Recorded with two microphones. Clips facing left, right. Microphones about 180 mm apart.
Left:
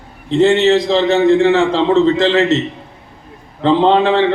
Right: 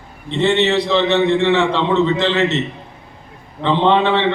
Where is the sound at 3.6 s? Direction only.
40° left (ahead or behind).